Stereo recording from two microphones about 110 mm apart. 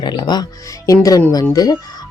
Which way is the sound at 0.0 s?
40° left (ahead or behind).